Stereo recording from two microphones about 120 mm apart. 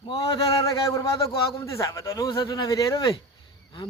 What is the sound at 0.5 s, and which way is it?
A man's voice, 30° left (ahead or behind).